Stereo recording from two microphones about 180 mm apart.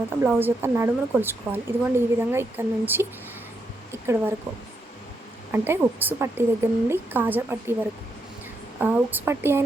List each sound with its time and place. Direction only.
0.3 s speech: 10° right (ahead or behind)
5.5 s speech: 15° right (ahead or behind)